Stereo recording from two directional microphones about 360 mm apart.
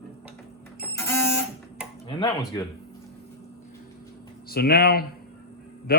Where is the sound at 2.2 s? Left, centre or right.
Centre.